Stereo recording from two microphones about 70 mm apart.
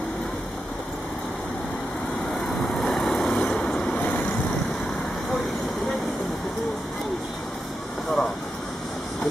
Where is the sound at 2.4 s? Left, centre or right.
Centre.